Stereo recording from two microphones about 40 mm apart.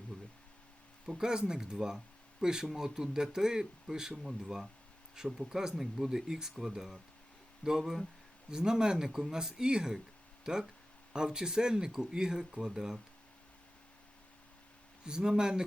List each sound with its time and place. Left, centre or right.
0.1 s a sound: centre
1.0 s speech: centre
15.0 s speech: centre